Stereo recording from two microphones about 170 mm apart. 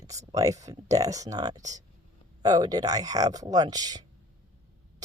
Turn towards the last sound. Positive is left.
turn(degrees=-20)  # may be behind; listen again after turning